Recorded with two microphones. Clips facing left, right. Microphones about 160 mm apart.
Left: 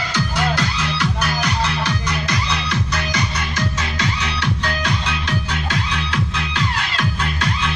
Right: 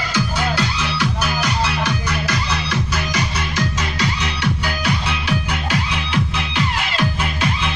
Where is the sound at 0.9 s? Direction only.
10° right (ahead or behind).